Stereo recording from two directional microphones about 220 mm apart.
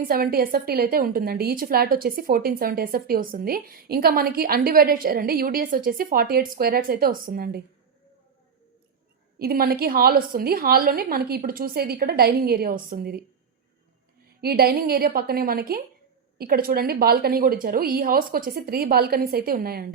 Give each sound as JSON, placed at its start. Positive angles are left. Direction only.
{"t": 0.1, "sound": "a woman's voice", "side_deg": -40}
{"t": 9.4, "sound": "a woman's voice", "side_deg": -45}
{"t": 14.4, "sound": "a woman's voice", "side_deg": -45}